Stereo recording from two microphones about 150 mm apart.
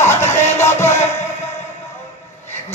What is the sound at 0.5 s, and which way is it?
Music, 15° left (ahead or behind).